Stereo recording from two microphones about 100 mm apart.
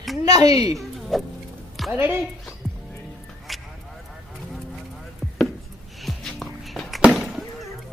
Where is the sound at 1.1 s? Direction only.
Centre (ahead or behind).